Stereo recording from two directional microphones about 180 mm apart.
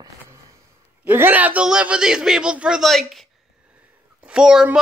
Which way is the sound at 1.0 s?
10° right (ahead or behind).